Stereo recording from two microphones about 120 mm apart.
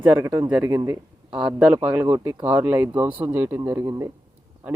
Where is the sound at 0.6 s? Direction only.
30° right (ahead or behind).